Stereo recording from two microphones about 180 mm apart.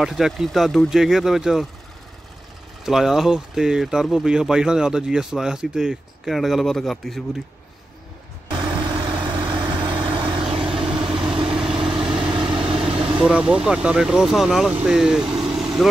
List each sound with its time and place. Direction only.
0.0 s speech: centre (ahead or behind)
2.8 s speech: centre (ahead or behind)
8.5 s vehicle: 25° right (ahead or behind)
13.2 s speech: 5° right (ahead or behind)